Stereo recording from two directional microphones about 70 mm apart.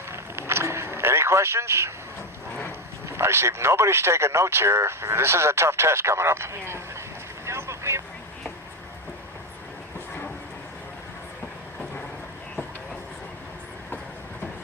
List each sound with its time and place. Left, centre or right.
0.1 s vehicle: right
3.1 s speech: right
7.4 s boat: right